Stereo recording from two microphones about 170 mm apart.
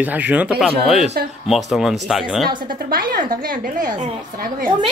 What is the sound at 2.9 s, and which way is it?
A woman's voice, 55° right (ahead or behind).